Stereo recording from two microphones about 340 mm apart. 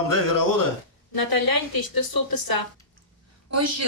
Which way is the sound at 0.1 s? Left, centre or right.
Left.